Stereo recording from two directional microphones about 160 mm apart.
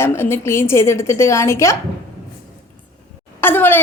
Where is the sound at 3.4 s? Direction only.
15° left (ahead or behind).